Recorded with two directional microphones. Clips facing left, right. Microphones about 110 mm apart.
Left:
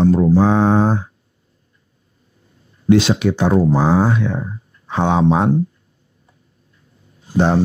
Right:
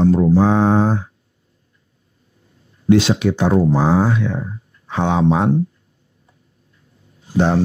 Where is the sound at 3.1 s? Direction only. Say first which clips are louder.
Even; 30° left (ahead or behind).